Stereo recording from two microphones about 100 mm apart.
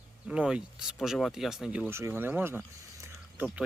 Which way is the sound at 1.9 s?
25° right (ahead or behind).